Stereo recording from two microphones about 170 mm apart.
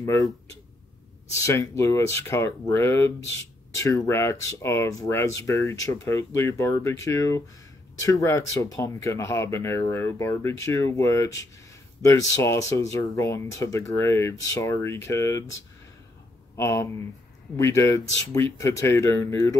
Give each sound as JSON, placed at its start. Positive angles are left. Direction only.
{"t": 1.3, "sound": "speech", "side_deg": 15}
{"t": 16.5, "sound": "speech", "side_deg": 15}